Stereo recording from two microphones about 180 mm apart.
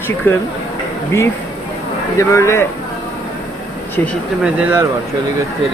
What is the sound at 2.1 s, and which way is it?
Speech, 15° left (ahead or behind).